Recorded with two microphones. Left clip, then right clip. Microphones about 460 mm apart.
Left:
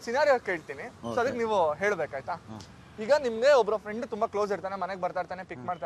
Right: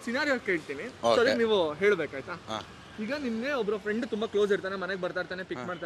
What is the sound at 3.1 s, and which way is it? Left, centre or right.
Speech, left.